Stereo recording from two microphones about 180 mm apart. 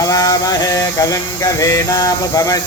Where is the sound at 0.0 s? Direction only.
20° left (ahead or behind).